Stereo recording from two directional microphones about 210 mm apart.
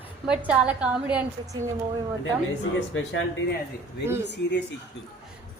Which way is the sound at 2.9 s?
70° left (ahead or behind).